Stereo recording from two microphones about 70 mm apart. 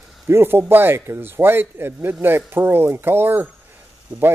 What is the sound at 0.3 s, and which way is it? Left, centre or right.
Speech, right.